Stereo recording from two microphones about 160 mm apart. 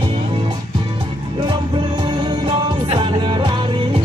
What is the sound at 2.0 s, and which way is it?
Music, 30° right (ahead or behind).